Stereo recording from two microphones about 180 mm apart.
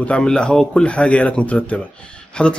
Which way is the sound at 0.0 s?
5° left (ahead or behind).